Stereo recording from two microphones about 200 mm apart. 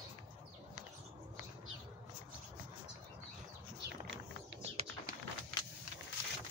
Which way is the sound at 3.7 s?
60° right (ahead or behind).